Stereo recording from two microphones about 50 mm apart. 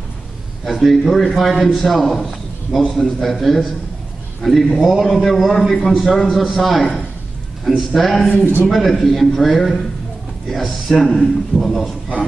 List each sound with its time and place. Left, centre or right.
0.7 s a man's voice: centre